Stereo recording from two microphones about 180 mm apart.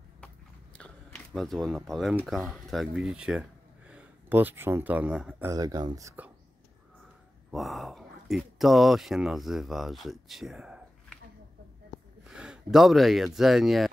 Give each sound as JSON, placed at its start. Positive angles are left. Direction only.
{"t": 0.7, "sound": "speech", "side_deg": 5}
{"t": 5.5, "sound": "speech", "side_deg": -20}
{"t": 7.5, "sound": "speech", "side_deg": 0}
{"t": 12.3, "sound": "speech", "side_deg": -5}